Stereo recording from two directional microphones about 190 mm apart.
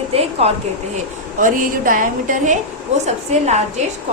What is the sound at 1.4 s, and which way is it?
A woman's voice, 45° right (ahead or behind).